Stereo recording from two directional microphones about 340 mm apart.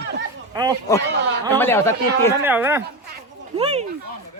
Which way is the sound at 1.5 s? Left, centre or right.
Centre.